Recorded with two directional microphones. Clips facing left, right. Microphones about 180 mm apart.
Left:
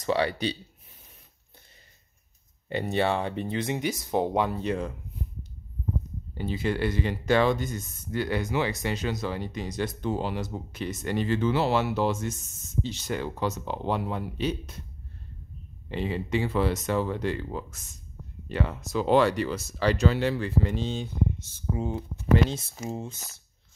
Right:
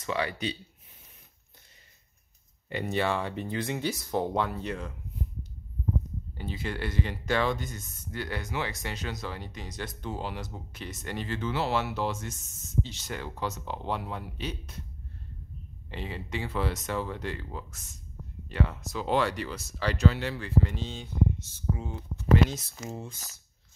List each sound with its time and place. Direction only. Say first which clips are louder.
0.0 s speech: left 5 dB; 30° left (ahead or behind)
2.7 s speech: left 3 dB; 30° left (ahead or behind)
6.3 s speech: left 7 dB; 20° left (ahead or behind)
10.0 s speech: left 4 dB; 25° left (ahead or behind)
15.9 s speech: left 8 dB; 20° left (ahead or behind)
18.5 s speech: left 2 dB; 30° left (ahead or behind)